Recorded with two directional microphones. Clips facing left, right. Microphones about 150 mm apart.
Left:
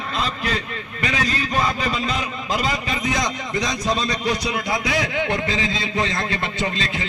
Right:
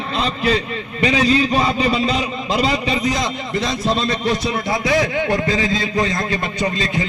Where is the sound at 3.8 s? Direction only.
25° right (ahead or behind).